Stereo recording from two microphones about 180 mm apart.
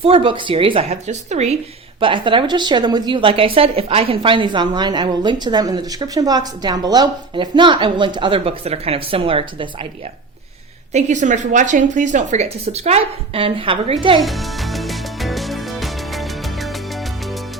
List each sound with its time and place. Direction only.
0.0 s a woman's voice: 30° right (ahead or behind)
2.0 s a woman's voice: 30° right (ahead or behind)
10.9 s a woman's voice: 40° right (ahead or behind)
14.2 s music: centre (ahead or behind)